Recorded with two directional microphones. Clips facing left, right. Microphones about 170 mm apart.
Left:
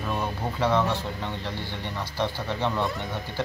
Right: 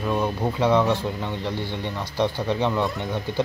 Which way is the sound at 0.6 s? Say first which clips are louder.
Right 4 dB; 15° right (ahead or behind).